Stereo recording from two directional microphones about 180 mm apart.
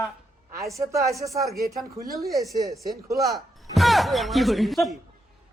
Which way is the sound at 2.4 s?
20° right (ahead or behind).